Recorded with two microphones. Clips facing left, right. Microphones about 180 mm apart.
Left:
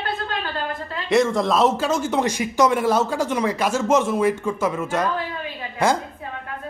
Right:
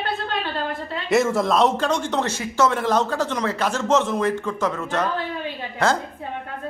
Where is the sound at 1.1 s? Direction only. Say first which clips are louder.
Left 1 dB; 5° right (ahead or behind).